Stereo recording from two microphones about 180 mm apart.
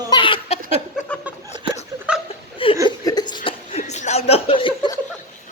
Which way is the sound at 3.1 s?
25° left (ahead or behind).